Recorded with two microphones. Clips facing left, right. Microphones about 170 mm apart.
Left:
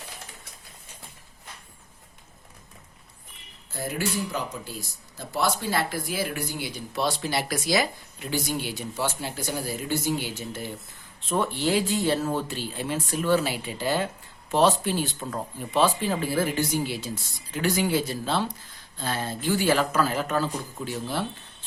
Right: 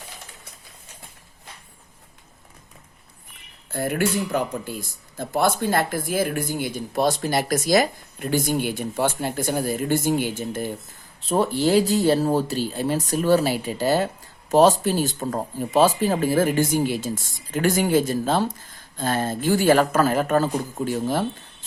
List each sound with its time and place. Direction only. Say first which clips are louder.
3.7 s speech: right 6 dB; 60° right (ahead or behind)
11.2 s speech: right 5 dB; 40° right (ahead or behind)